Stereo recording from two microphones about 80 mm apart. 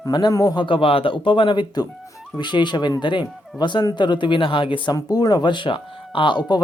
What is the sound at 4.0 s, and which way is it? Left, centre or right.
Speech, left.